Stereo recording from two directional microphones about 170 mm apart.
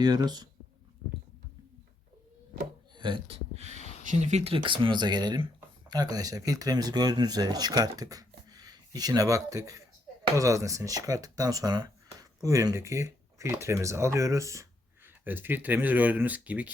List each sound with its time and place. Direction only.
0.0 s speech: 25° right (ahead or behind)
2.9 s speech: 25° right (ahead or behind); by 16.7 s 10° right (ahead or behind)